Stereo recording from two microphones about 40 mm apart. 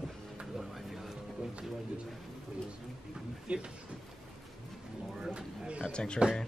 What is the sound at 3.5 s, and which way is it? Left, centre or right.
Speech, right.